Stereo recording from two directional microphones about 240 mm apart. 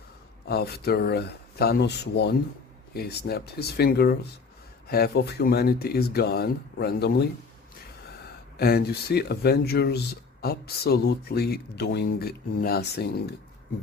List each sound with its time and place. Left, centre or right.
0.4 s speech: left
8.5 s speech: left